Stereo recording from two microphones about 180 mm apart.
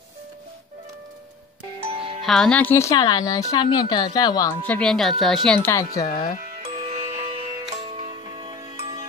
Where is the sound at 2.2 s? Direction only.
Centre (ahead or behind); by 4.6 s 20° left (ahead or behind).